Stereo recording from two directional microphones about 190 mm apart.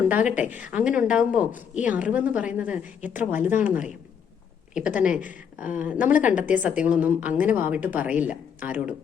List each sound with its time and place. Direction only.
0.1 s a woman's voice: 5° right (ahead or behind)
4.7 s a woman's voice: 5° right (ahead or behind)